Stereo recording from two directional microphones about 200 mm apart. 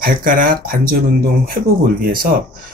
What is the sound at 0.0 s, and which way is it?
Speech, 45° right (ahead or behind).